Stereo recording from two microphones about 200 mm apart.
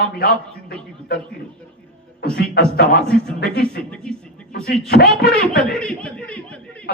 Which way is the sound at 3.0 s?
5° left (ahead or behind).